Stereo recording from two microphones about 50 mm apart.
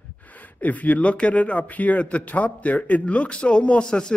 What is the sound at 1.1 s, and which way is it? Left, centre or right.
A man's voice, left.